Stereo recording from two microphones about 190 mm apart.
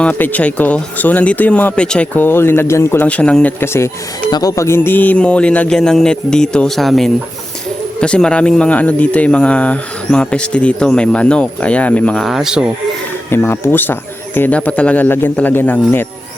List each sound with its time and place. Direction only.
0.0 s speech: 10° left (ahead or behind)
13.3 s speech: 10° left (ahead or behind)